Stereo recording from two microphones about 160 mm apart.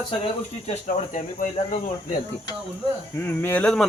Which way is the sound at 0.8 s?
55° left (ahead or behind).